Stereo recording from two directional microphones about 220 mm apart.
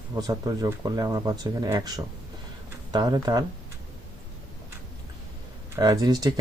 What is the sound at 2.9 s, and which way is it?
Speech, 20° right (ahead or behind).